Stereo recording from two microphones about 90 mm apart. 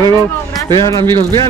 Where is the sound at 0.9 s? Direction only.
55° right (ahead or behind).